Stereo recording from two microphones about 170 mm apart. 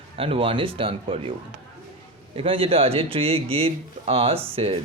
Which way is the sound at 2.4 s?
35° right (ahead or behind).